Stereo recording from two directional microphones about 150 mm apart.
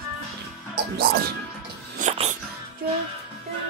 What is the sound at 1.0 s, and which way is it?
Music, 90° right.